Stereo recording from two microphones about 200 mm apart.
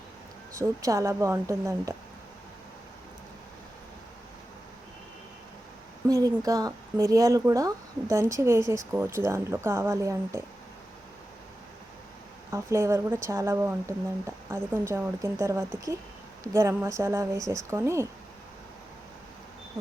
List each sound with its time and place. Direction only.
0.8 s speech: 15° right (ahead or behind)
6.1 s speech: 20° right (ahead or behind)
12.5 s speech: 15° right (ahead or behind)